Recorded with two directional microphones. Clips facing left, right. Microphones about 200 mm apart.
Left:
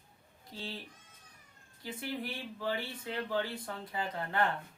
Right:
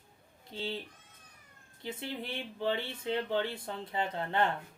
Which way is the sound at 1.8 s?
25° right (ahead or behind).